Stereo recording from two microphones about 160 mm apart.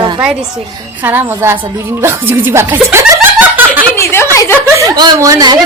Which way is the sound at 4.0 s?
15° left (ahead or behind).